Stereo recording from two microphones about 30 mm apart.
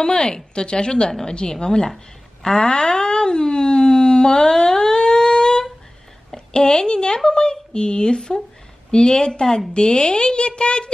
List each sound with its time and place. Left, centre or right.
0.0 s speech: left
2.4 s a sound: left
6.3 s a woman's voice: left